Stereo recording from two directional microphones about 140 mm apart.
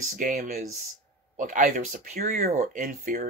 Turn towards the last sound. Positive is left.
turn(degrees=-70)  # may be behind; listen again after turning